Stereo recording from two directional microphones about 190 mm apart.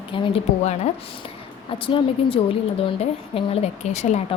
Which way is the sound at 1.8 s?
30° left (ahead or behind).